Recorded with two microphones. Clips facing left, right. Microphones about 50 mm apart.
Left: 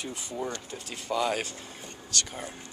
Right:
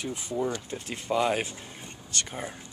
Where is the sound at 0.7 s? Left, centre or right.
Right.